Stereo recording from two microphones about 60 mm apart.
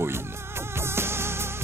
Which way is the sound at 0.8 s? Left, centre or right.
Right.